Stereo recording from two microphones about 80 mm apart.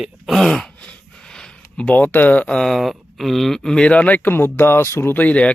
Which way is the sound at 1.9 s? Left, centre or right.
Left.